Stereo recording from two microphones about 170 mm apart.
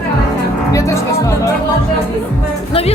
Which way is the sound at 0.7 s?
20° left (ahead or behind).